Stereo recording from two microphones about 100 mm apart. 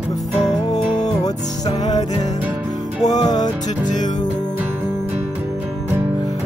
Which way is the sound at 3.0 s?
40° left (ahead or behind).